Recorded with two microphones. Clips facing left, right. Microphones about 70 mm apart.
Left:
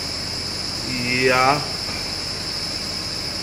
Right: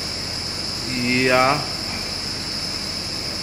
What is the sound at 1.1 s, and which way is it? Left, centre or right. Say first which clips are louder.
Speech: even; centre.